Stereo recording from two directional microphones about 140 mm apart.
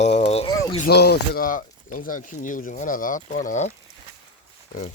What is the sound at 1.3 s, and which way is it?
Speech, 75° left (ahead or behind).